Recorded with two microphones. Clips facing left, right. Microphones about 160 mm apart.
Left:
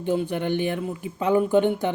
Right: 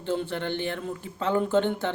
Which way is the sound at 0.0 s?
15° left (ahead or behind).